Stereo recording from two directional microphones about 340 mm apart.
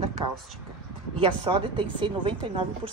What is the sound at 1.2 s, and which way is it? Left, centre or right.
A woman's voice, centre.